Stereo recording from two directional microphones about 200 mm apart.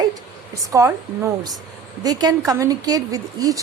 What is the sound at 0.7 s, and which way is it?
A woman's voice, 15° right (ahead or behind).